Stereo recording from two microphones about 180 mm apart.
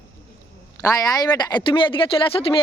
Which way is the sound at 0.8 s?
20° left (ahead or behind).